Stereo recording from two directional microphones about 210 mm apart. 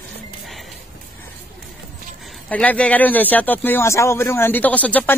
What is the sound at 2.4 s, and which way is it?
Speech, 5° left (ahead or behind).